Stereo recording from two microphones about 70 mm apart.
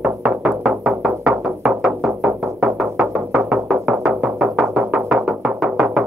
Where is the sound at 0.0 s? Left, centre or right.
Centre.